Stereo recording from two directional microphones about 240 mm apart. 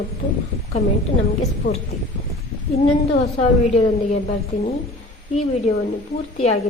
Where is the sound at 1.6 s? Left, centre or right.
Left.